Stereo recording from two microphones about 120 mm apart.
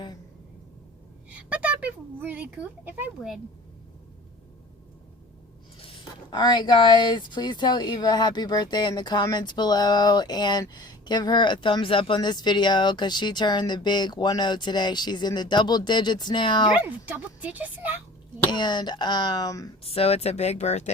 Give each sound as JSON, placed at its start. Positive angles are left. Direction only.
{"t": 1.3, "sound": "speech", "side_deg": -10}
{"t": 3.2, "sound": "speech", "side_deg": 0}
{"t": 5.8, "sound": "a sound", "side_deg": 50}
{"t": 6.4, "sound": "speech", "side_deg": 35}
{"t": 16.7, "sound": "speech", "side_deg": -15}
{"t": 18.5, "sound": "speech", "side_deg": 40}
{"t": 19.8, "sound": "speech", "side_deg": 55}